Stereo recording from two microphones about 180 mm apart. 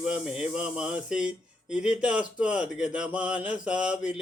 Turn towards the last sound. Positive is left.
turn(degrees=-5)  # may be behind; listen again after turning